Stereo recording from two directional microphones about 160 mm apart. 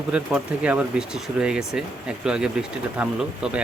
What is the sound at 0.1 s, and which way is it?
Speech, 5° right (ahead or behind).